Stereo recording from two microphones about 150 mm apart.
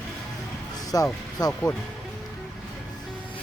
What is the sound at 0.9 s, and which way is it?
Speech, 25° left (ahead or behind).